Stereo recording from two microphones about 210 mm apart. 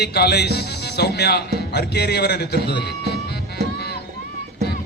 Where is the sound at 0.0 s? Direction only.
50° left (ahead or behind).